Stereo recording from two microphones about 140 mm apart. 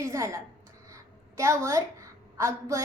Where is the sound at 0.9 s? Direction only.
20° right (ahead or behind).